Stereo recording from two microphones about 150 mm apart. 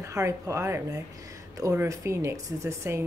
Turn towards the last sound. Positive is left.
turn(degrees=-20)  # may be behind; listen again after turning